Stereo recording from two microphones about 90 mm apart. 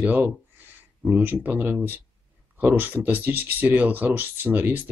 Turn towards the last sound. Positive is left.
turn(degrees=-20)  # may be behind; listen again after turning